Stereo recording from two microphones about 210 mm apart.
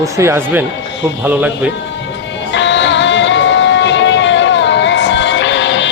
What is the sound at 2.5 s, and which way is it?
Music, 60° left (ahead or behind).